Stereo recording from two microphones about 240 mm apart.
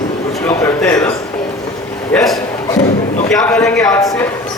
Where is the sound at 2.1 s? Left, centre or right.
Centre.